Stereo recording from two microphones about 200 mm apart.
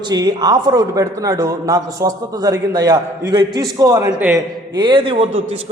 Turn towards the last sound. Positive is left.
turn(degrees=-30)  # may be behind; listen again after turning